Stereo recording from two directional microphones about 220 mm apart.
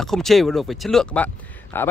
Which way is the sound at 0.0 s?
Centre (ahead or behind).